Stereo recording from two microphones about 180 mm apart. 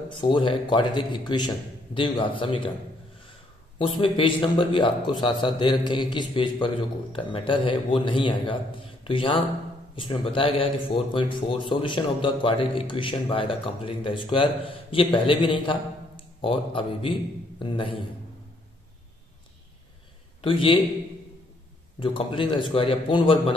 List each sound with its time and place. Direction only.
0.1 s speech: 25° left (ahead or behind)
3.7 s speech: 30° left (ahead or behind)
20.4 s speech: 30° left (ahead or behind)
22.0 s speech: 30° left (ahead or behind)